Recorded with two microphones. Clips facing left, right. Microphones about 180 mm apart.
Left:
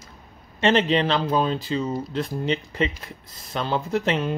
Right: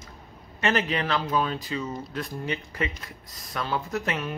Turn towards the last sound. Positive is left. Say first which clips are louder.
# left 6 dB
turn(degrees=25)  # may be behind; listen again after turning